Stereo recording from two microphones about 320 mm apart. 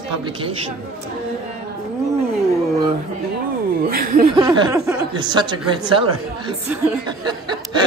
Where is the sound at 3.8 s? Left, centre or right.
Right.